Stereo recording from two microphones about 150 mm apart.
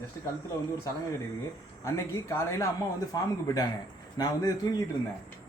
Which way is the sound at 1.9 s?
20° left (ahead or behind).